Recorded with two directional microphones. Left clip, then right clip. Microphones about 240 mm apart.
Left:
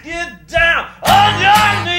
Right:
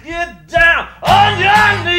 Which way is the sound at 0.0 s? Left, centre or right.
Centre.